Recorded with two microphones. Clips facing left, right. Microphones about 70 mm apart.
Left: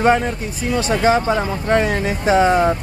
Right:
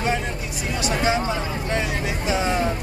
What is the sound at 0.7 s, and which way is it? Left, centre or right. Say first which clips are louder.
Speech: left 6 dB; left.